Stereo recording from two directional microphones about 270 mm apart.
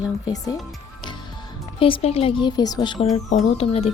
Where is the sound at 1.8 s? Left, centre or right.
Centre.